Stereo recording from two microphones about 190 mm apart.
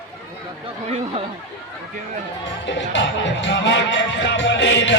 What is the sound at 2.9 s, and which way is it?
Music, 70° left (ahead or behind).